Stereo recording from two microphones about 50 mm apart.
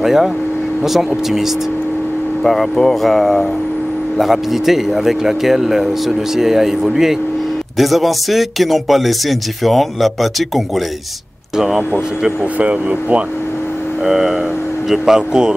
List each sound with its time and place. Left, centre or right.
0.0 s speech: centre
2.4 s speech: centre
12.5 s speech: right
14.0 s speech: centre